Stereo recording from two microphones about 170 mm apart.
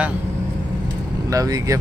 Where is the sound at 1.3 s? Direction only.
20° right (ahead or behind).